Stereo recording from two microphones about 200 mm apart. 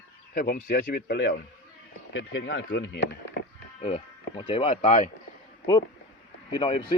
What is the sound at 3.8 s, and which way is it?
Speech, 30° left (ahead or behind).